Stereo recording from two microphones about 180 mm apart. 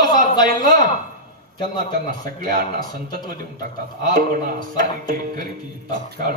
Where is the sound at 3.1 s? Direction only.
50° right (ahead or behind).